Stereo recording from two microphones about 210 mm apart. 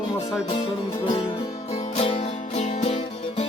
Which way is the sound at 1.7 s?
30° left (ahead or behind).